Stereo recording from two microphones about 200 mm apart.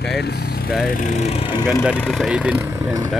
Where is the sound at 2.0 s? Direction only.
Centre (ahead or behind).